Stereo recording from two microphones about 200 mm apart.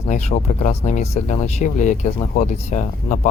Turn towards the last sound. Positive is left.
turn(degrees=35)  # may be behind; listen again after turning